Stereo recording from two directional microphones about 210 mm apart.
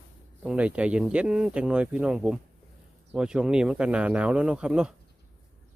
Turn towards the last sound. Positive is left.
turn(degrees=-5)  # may be behind; listen again after turning